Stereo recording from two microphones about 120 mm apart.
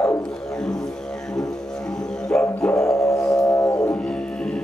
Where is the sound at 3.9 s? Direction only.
5° left (ahead or behind).